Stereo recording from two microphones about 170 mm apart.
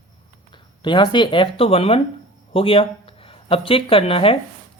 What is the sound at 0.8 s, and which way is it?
Speech, 25° left (ahead or behind).